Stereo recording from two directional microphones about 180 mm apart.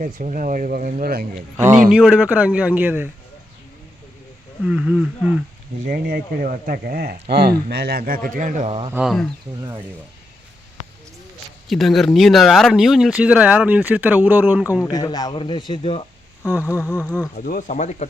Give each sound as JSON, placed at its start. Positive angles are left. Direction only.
{"t": 0.0, "sound": "speech", "side_deg": -45}
{"t": 1.9, "sound": "a man's voice", "side_deg": -5}
{"t": 4.6, "sound": "speech", "side_deg": -5}
{"t": 5.8, "sound": "speech", "side_deg": -50}
{"t": 8.9, "sound": "speech", "side_deg": -5}
{"t": 11.7, "sound": "speech", "side_deg": 0}
{"t": 14.8, "sound": "a man's voice", "side_deg": 20}
{"t": 16.8, "sound": "speech", "side_deg": 5}
{"t": 17.4, "sound": "speech", "side_deg": 50}